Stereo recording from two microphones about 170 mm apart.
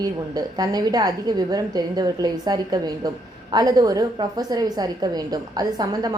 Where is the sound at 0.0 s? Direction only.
25° right (ahead or behind).